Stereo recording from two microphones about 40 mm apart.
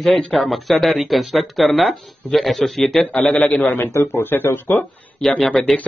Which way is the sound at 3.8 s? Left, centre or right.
Left.